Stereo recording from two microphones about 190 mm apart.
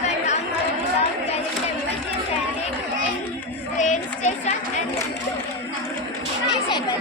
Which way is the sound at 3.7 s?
40° left (ahead or behind).